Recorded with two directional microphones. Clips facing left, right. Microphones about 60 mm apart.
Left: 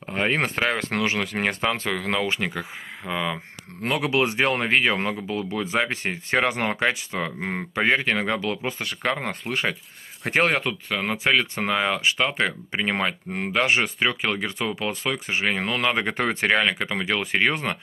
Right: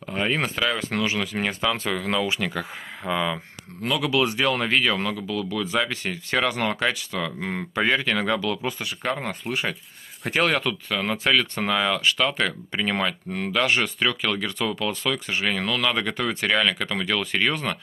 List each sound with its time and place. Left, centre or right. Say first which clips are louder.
0.1 s speech: left 1 dB; left
3.1 s speech: right 2 dB; centre
3.8 s speech: even; left
8.8 s speech: left 4 dB; left
10.3 s speech: left 1 dB; left